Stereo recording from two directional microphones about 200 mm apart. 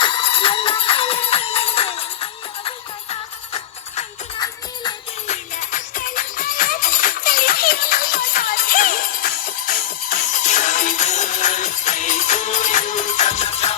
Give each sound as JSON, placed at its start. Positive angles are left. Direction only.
{"t": 0.0, "sound": "music", "side_deg": 25}
{"t": 4.4, "sound": "music", "side_deg": 20}
{"t": 5.3, "sound": "music", "side_deg": 40}